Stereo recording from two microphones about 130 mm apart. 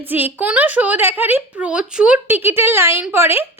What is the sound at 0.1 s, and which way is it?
A woman's voice, 15° right (ahead or behind).